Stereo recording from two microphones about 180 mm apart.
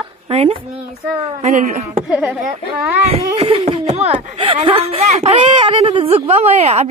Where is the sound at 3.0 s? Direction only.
35° right (ahead or behind).